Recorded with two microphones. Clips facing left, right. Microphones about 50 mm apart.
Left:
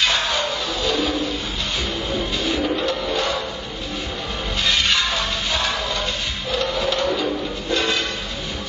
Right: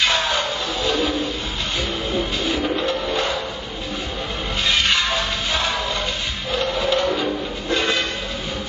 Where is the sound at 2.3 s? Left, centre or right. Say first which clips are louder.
Even; right.